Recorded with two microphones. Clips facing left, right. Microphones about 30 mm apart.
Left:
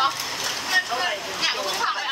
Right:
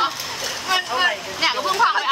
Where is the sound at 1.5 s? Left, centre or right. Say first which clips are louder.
Right 6 dB; right.